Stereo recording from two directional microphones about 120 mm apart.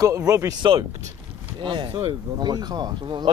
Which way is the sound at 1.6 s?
40° right (ahead or behind).